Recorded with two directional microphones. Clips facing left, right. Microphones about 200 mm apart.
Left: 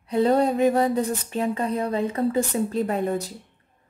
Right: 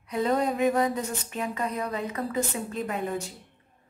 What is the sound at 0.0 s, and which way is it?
Speech, 30° left (ahead or behind).